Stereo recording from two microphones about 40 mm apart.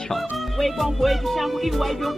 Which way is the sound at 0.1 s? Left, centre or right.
Centre.